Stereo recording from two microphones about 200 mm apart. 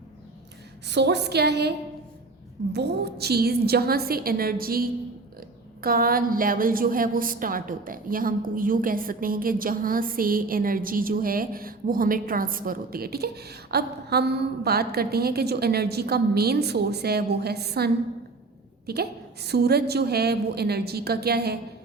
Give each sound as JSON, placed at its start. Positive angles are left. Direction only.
{"t": 0.9, "sound": "a woman's voice", "side_deg": -60}
{"t": 2.7, "sound": "a woman's voice", "side_deg": -55}